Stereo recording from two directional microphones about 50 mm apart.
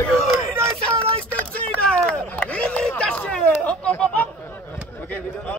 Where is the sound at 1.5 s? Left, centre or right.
Left.